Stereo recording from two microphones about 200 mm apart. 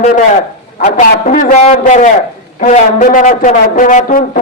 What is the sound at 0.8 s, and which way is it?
A man's voice, 35° left (ahead or behind).